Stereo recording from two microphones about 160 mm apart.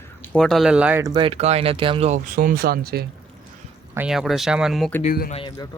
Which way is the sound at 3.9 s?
5° right (ahead or behind).